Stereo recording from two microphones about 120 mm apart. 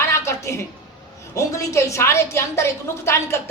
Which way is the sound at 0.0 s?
25° left (ahead or behind).